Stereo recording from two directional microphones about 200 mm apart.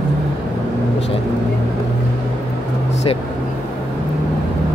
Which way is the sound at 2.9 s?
30° left (ahead or behind).